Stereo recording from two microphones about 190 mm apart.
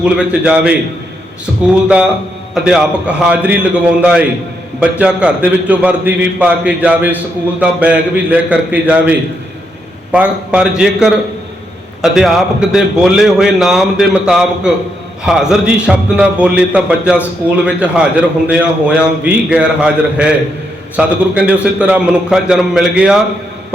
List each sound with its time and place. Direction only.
0.0 s a man's voice: 5° right (ahead or behind)
2.6 s a man's voice: 5° right (ahead or behind)